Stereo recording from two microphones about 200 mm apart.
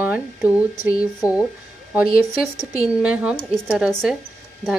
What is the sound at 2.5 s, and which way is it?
Speech, 15° left (ahead or behind).